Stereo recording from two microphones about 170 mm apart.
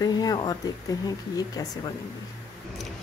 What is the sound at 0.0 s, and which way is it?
Speech, 25° left (ahead or behind).